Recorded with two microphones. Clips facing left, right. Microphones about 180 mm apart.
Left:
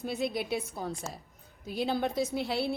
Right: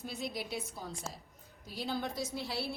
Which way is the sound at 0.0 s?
60° left (ahead or behind).